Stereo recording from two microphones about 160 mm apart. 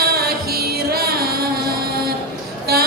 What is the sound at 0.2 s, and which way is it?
Music, 70° right (ahead or behind).